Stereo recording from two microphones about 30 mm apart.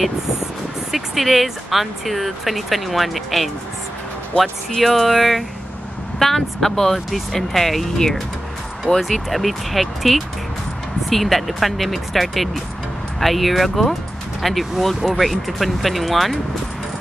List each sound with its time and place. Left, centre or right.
0.9 s speech: centre
8.9 s speech: left
9.3 s speech: centre